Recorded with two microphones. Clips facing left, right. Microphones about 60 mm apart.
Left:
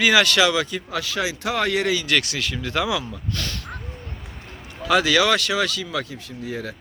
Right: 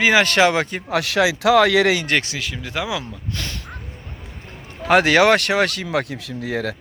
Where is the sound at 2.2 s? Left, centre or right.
Centre.